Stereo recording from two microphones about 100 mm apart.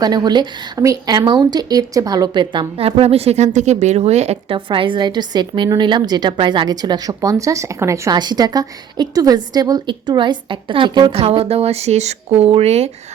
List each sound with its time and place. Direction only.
0.0 s a woman's voice: 45° right (ahead or behind)
0.8 s speech: 35° right (ahead or behind)
1.1 s a woman's voice: 45° right (ahead or behind)
2.7 s speech: 85° right
4.5 s a woman's voice: 60° right (ahead or behind); by 8.1 s 30° right (ahead or behind)
8.1 s a woman's voice: 45° right (ahead or behind)
11.1 s speech: 75° right (ahead or behind)